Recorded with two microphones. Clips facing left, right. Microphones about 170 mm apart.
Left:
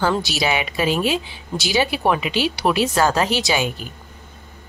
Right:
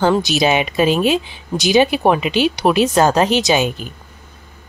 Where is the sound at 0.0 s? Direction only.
20° right (ahead or behind).